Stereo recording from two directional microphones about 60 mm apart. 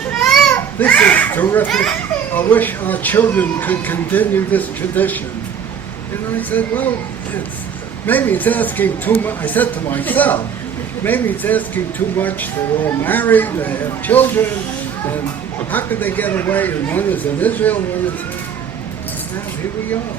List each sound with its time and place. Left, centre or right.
0.2 s children playing: centre
0.5 s a child's voice: left
1.7 s a child's voice: centre
2.3 s speech: left
6.3 s a man's voice: left
8.0 s a man's voice: left
15.7 s speech: left